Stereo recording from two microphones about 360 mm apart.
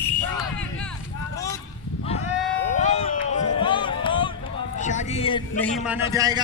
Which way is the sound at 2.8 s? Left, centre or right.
Centre.